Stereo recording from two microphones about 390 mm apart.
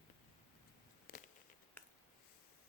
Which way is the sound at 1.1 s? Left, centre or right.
Left.